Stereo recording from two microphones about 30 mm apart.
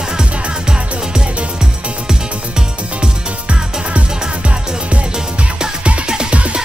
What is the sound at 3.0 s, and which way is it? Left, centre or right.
Music, right.